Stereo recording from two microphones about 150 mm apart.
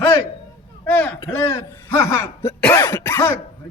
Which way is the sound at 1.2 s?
10° left (ahead or behind).